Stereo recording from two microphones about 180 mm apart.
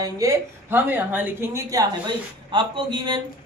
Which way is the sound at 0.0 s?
15° right (ahead or behind).